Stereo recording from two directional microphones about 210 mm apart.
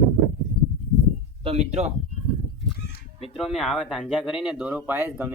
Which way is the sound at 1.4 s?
30° right (ahead or behind).